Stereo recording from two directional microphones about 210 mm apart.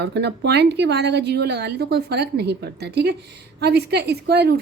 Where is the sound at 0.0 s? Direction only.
55° right (ahead or behind).